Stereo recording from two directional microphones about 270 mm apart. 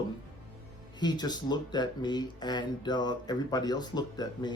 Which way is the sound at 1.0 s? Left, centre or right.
Centre.